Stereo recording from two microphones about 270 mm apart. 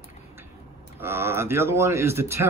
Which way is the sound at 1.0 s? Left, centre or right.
Centre.